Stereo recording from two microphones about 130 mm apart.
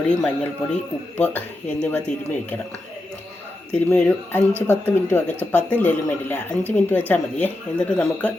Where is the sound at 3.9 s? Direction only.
15° left (ahead or behind).